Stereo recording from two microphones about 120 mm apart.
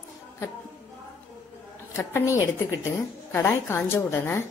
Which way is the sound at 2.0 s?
25° left (ahead or behind).